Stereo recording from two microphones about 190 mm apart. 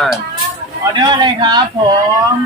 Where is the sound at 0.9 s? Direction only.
25° right (ahead or behind).